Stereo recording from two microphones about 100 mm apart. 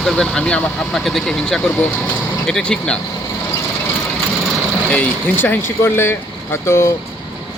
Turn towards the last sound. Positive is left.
turn(degrees=25)  # may be behind; listen again after turning